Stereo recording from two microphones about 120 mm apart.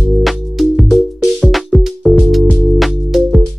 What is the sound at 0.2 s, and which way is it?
Music, centre (ahead or behind).